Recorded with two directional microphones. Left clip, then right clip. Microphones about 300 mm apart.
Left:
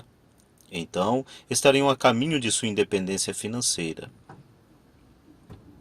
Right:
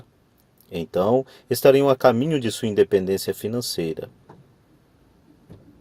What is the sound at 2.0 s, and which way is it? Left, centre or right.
Speech, right.